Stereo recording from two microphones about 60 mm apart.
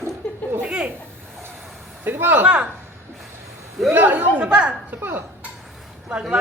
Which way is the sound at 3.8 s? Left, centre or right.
Right.